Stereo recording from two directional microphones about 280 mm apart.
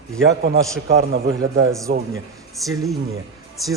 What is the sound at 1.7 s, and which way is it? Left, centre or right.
Speech, centre.